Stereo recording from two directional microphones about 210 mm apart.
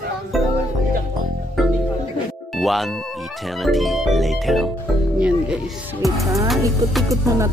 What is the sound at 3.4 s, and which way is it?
Speech, centre (ahead or behind).